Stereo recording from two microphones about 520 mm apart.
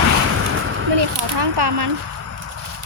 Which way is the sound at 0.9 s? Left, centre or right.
Right.